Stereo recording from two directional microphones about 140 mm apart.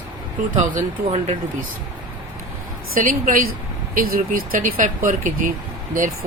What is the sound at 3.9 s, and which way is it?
Speech, 90° right.